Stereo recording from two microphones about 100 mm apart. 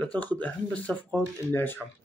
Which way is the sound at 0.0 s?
15° left (ahead or behind).